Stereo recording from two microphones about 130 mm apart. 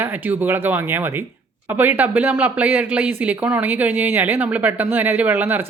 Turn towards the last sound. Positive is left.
turn(degrees=-15)  # may be behind; listen again after turning